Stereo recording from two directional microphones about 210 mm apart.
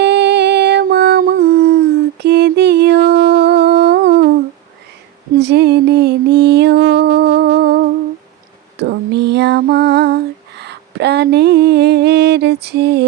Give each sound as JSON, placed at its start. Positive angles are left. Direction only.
{"t": 0.0, "sound": "music", "side_deg": -55}
{"t": 5.4, "sound": "music", "side_deg": -55}
{"t": 8.8, "sound": "female singing", "side_deg": -55}
{"t": 10.6, "sound": "a sound", "side_deg": -55}
{"t": 12.6, "sound": "music", "side_deg": -50}